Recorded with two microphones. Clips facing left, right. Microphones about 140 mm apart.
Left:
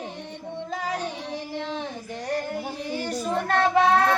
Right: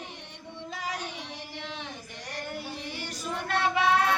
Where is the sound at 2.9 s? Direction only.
40° left (ahead or behind).